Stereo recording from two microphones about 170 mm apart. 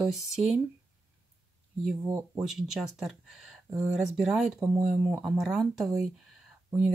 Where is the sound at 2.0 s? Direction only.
15° right (ahead or behind).